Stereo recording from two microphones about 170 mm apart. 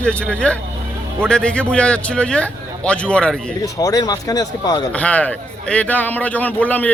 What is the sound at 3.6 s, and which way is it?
Speech, 20° left (ahead or behind).